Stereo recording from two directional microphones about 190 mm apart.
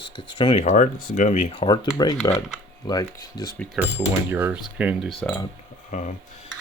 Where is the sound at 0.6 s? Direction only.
40° left (ahead or behind); by 3.4 s 20° left (ahead or behind).